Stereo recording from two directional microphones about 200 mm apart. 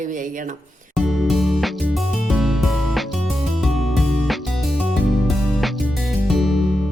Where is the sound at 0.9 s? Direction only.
Centre (ahead or behind).